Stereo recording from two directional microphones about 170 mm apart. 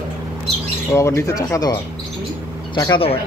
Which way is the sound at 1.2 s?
20° left (ahead or behind).